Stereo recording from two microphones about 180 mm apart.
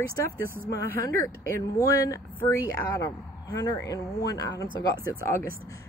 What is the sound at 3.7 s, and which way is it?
Speech, 20° left (ahead or behind).